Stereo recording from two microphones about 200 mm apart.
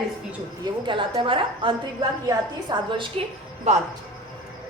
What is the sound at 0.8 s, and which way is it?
A woman's voice, 25° right (ahead or behind).